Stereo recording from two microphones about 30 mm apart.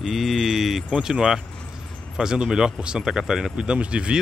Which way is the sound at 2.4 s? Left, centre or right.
Centre.